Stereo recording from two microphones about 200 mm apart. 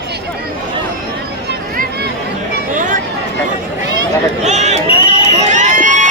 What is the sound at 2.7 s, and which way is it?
Chatter, 40° right (ahead or behind).